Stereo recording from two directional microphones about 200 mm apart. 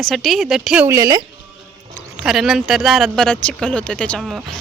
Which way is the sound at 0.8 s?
15° right (ahead or behind).